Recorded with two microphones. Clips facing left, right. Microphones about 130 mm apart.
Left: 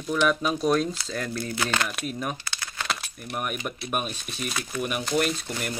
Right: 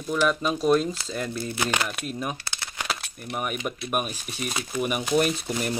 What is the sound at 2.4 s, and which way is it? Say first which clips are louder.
Crumpling: even; 25° right (ahead or behind).